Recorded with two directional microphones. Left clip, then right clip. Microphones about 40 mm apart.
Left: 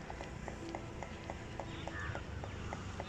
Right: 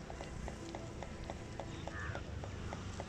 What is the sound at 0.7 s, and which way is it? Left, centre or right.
Clip-clop, centre.